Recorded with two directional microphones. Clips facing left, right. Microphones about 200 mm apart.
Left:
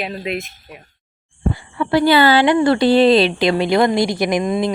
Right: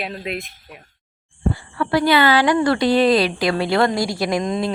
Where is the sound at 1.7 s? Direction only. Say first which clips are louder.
Left 3 dB; 25° left (ahead or behind).